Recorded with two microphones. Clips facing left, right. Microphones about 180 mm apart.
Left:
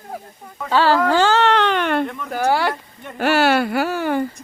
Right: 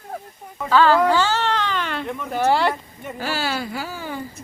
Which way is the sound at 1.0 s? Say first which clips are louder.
Left 3 dB; 45° left (ahead or behind).